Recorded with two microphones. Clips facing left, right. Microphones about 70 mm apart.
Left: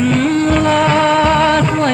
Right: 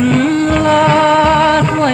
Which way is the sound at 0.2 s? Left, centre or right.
Centre.